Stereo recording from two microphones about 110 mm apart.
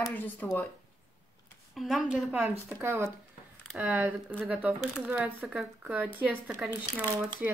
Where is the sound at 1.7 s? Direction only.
Centre (ahead or behind).